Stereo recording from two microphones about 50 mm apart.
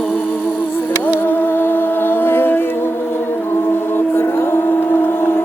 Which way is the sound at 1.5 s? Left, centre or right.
Left.